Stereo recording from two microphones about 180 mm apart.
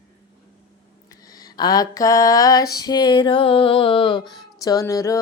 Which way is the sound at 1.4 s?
20° left (ahead or behind).